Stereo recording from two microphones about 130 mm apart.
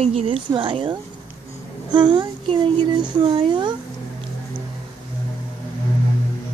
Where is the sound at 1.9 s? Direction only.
35° right (ahead or behind).